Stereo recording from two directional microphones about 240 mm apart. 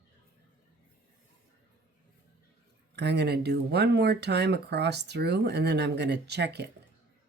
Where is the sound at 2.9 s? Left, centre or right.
Right.